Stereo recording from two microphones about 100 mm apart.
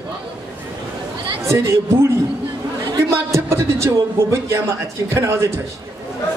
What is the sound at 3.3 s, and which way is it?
A man's voice, 25° right (ahead or behind).